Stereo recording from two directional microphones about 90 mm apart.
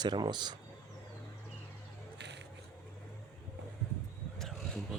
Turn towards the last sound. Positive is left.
turn(degrees=5)  # may be behind; listen again after turning